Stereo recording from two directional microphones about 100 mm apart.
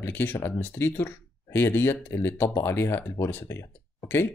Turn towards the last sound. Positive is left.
turn(degrees=20)  # may be behind; listen again after turning